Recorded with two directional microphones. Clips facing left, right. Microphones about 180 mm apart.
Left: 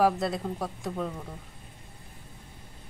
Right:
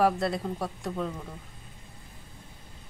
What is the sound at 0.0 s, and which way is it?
Speech, centre (ahead or behind).